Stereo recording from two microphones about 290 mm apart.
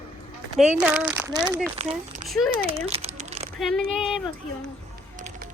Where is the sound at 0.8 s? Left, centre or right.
Centre.